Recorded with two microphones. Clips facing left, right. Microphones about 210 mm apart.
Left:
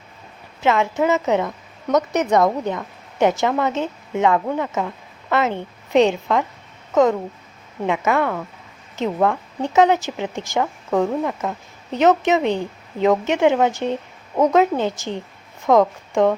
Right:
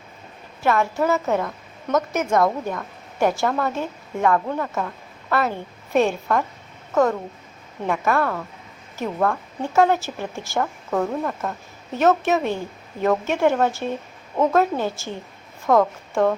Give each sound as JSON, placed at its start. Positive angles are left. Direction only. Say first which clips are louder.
{"t": 0.6, "sound": "a woman's voice", "louder": "left 2 dB", "side_deg": 20}